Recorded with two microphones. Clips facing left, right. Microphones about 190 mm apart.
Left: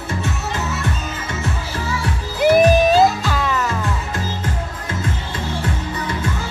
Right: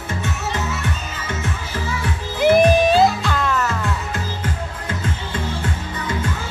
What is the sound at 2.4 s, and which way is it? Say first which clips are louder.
Music: left 1 dB; centre (ahead or behind).